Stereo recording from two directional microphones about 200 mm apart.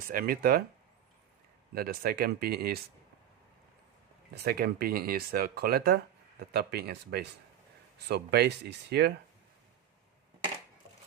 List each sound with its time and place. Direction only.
0.1 s speech: 50° right (ahead or behind)
1.7 s speech: 50° right (ahead or behind)
4.4 s speech: 50° right (ahead or behind)